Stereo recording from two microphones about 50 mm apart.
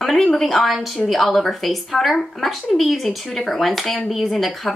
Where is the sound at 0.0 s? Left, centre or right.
Centre.